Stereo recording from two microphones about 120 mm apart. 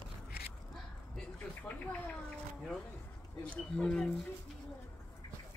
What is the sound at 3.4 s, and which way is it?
Speech, 10° left (ahead or behind).